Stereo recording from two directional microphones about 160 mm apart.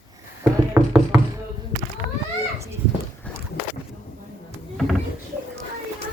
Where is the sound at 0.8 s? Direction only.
15° right (ahead or behind).